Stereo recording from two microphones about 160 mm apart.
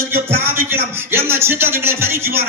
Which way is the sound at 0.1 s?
15° right (ahead or behind).